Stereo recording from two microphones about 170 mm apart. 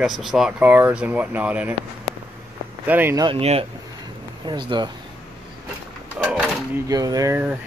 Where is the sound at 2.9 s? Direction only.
15° right (ahead or behind).